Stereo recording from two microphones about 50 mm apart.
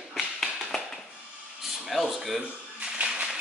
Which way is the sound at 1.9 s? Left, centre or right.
Centre.